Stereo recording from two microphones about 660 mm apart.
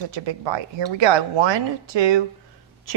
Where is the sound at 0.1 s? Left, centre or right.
Right.